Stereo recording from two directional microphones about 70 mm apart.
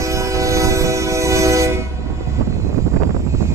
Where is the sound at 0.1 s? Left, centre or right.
Right.